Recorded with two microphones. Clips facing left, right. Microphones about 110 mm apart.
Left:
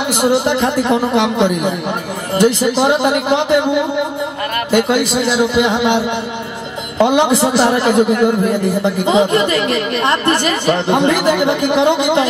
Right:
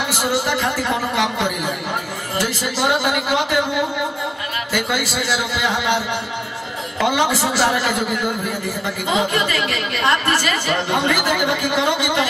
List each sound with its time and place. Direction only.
0.1 s a woman's voice: 20° left (ahead or behind)
4.6 s a woman's voice: 20° left (ahead or behind)